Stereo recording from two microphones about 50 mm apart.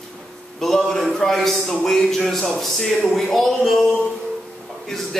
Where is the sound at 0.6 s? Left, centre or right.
Centre.